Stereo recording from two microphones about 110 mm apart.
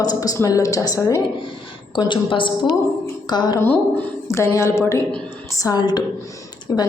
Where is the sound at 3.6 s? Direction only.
20° left (ahead or behind).